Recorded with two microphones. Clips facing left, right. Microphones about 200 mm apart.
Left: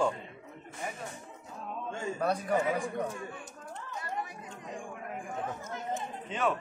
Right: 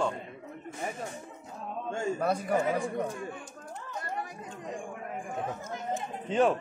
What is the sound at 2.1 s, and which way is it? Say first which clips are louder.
Speech: even; 5° right (ahead or behind).